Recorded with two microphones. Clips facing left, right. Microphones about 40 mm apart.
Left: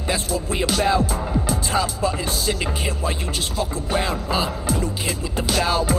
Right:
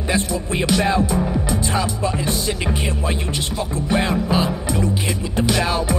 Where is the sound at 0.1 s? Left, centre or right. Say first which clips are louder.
Right 2 dB; centre.